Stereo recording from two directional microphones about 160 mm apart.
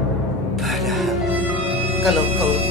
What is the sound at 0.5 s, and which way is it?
Music, centre (ahead or behind).